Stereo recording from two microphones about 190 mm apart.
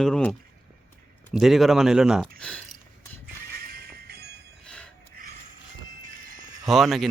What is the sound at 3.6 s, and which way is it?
Jingle bell, 50° right (ahead or behind).